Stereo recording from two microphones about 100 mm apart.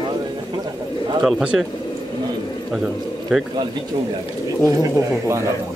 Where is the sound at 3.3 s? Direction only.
5° right (ahead or behind).